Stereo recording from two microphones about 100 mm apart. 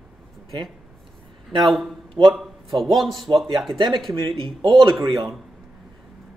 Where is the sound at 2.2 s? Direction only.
25° right (ahead or behind).